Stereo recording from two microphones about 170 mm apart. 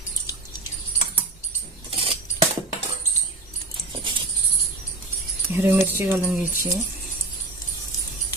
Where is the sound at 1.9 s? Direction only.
35° right (ahead or behind).